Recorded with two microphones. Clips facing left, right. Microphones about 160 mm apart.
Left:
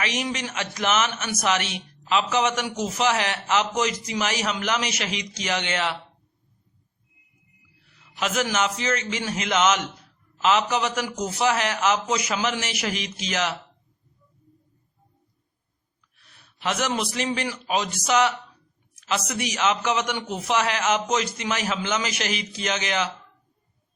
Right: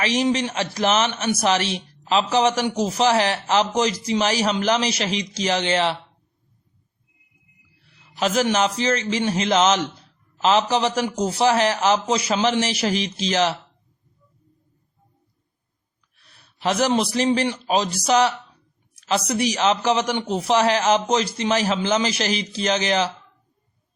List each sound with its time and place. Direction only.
0.0 s a man's voice: 30° right (ahead or behind)
8.1 s a man's voice: 35° right (ahead or behind)
16.2 s a man's voice: 35° right (ahead or behind)